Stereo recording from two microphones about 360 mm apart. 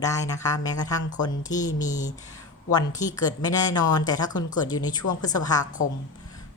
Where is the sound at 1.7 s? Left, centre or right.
Left.